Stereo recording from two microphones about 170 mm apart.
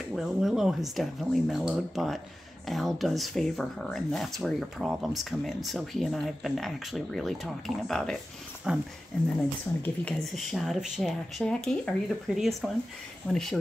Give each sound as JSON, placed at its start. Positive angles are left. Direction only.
{"t": 0.1, "sound": "speech", "side_deg": 0}